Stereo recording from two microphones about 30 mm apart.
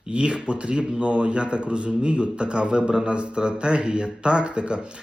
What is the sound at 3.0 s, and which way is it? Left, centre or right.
Speech, right.